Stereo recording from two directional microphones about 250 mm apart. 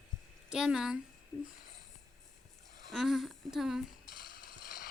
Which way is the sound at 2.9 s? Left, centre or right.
Centre.